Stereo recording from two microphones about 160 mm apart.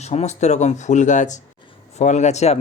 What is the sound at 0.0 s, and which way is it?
Speech, 45° left (ahead or behind).